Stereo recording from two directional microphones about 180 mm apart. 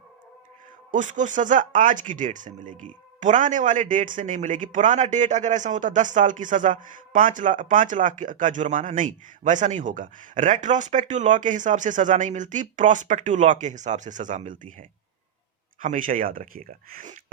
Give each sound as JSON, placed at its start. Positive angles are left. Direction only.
{"t": 0.9, "sound": "a man's voice", "side_deg": -45}